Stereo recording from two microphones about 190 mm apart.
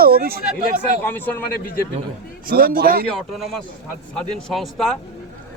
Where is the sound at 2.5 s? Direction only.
50° right (ahead or behind).